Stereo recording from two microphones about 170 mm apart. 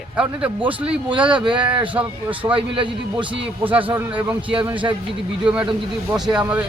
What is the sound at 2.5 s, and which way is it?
Speech, 30° right (ahead or behind).